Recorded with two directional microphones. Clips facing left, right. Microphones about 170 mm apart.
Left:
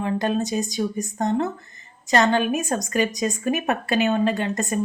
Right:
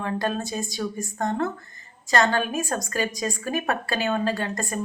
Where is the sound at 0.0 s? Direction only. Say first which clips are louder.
Left 4 dB; 20° left (ahead or behind).